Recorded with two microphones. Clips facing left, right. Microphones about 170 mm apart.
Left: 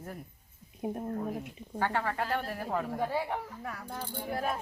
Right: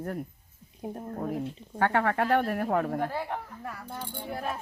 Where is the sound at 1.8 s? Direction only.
60° right (ahead or behind).